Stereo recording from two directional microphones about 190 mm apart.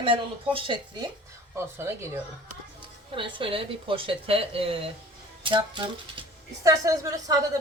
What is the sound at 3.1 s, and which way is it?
A woman's voice, 25° right (ahead or behind).